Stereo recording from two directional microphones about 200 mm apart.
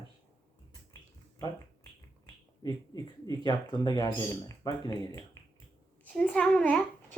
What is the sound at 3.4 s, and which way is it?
Speech, 20° left (ahead or behind).